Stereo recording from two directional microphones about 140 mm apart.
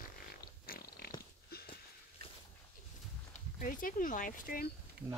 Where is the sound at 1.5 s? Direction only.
90° left.